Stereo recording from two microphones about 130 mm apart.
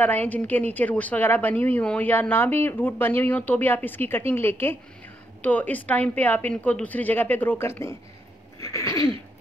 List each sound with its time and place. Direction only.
0.0 s a woman's voice: 15° left (ahead or behind)
8.5 s sneeze: 25° left (ahead or behind)